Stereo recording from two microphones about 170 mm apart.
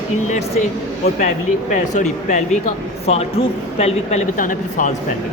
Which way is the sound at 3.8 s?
40° left (ahead or behind).